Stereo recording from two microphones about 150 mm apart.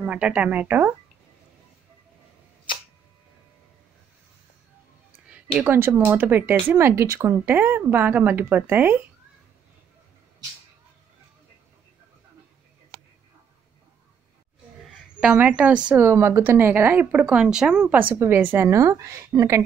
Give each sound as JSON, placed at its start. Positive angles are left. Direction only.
{"t": 0.0, "sound": "speech", "side_deg": -10}
{"t": 5.3, "sound": "speech", "side_deg": -10}
{"t": 15.1, "sound": "a woman's voice", "side_deg": -5}